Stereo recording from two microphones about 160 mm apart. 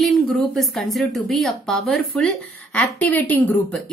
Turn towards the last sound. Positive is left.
turn(degrees=10)  # may be behind; listen again after turning